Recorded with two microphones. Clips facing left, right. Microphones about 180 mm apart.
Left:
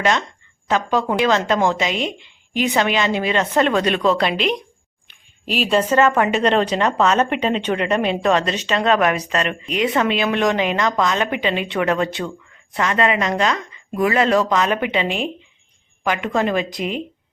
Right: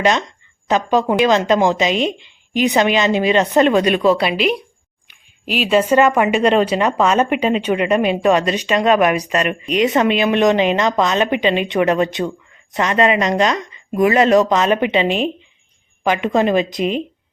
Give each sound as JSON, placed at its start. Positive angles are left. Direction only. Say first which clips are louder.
{"t": 0.0, "sound": "speech", "louder": "right 3 dB", "side_deg": -20}